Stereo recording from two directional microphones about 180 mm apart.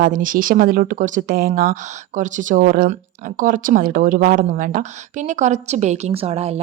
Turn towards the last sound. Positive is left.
turn(degrees=-35)  # may be behind; listen again after turning